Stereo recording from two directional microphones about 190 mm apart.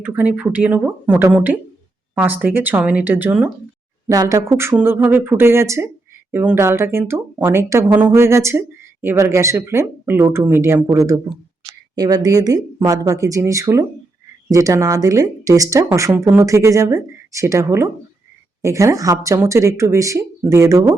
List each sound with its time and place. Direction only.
0.0 s speech: 10° right (ahead or behind)